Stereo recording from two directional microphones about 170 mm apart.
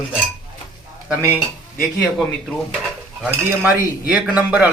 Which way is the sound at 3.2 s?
10° right (ahead or behind).